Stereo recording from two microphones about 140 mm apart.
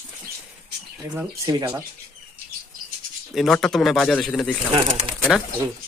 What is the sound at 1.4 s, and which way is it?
Speech, 30° right (ahead or behind).